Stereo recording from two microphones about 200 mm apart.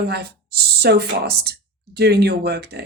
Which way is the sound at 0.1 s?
55° right (ahead or behind).